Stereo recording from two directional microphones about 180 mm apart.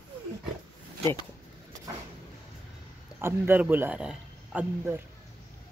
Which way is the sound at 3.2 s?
10° right (ahead or behind).